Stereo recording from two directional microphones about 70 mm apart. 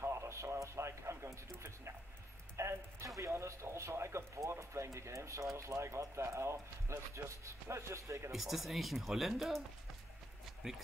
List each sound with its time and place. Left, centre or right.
0.0 s a sound: right
2.5 s speech: right
8.3 s speech: centre